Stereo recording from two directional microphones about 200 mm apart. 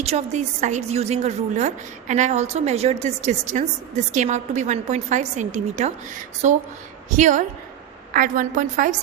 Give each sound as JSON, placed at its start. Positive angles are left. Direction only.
{"t": 0.0, "sound": "a woman's voice", "side_deg": -35}